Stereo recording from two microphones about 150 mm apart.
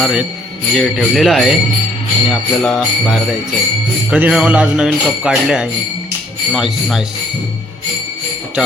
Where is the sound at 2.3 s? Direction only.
5° left (ahead or behind).